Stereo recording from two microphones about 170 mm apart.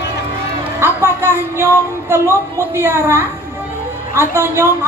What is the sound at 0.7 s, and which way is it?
A woman's voice, 15° right (ahead or behind).